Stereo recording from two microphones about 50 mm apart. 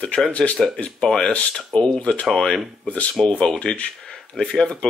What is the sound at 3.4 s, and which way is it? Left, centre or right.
Speech, centre.